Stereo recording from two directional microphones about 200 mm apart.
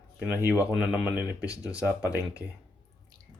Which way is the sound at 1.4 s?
15° left (ahead or behind).